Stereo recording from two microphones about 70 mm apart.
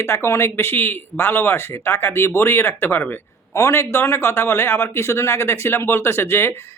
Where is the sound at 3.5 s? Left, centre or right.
Left.